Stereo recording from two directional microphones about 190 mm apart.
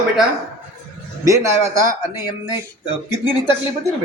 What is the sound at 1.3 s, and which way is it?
Speech, 15° right (ahead or behind).